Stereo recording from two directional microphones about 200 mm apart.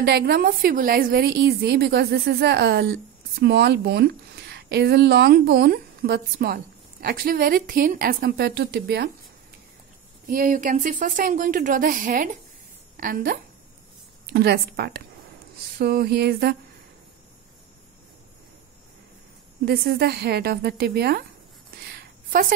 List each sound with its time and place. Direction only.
0.0 s a woman's voice: 50° right (ahead or behind)
10.2 s a woman's voice: 45° right (ahead or behind)
19.6 s a woman's voice: 50° right (ahead or behind)
21.8 s a sound: 50° right (ahead or behind)